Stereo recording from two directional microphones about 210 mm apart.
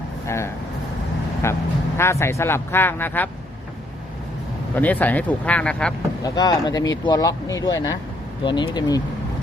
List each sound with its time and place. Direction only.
0.3 s speech: 15° left (ahead or behind)
4.7 s speech: 10° left (ahead or behind)
6.2 s speech: 20° left (ahead or behind)